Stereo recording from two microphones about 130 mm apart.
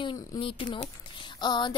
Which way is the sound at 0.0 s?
40° left (ahead or behind).